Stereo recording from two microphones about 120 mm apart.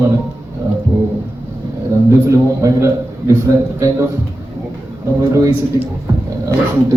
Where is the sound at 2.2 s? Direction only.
25° right (ahead or behind).